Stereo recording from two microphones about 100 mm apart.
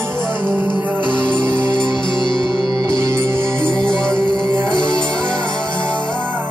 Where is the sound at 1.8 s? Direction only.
50° left (ahead or behind).